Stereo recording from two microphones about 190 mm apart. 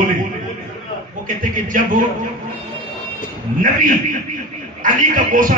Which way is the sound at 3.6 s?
45° right (ahead or behind).